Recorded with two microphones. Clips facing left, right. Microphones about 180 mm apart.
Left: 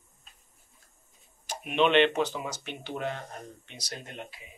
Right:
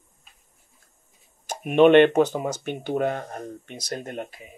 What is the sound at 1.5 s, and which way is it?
Speech, 50° right (ahead or behind).